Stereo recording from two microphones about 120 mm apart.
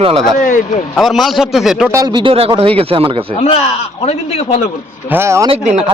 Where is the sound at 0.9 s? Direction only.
Centre (ahead or behind).